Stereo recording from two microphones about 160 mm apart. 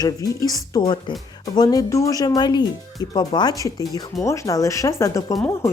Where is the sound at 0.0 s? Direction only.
20° left (ahead or behind).